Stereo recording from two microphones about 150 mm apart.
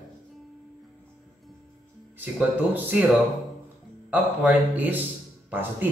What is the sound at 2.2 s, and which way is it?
Speech, 10° right (ahead or behind).